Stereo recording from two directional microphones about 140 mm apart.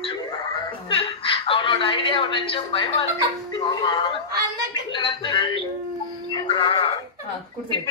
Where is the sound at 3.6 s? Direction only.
35° left (ahead or behind).